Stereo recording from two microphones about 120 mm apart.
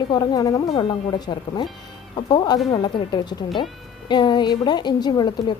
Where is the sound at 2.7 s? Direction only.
40° left (ahead or behind).